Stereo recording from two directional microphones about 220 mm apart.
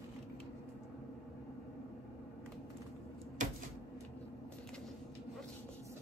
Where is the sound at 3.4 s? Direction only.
35° right (ahead or behind).